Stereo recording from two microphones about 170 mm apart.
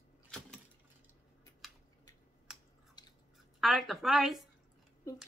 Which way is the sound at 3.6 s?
Centre (ahead or behind).